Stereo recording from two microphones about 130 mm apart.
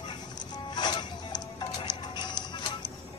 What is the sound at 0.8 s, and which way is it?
Music, 35° left (ahead or behind).